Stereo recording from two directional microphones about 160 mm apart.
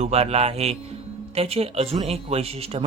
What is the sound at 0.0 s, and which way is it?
Speech, 40° right (ahead or behind).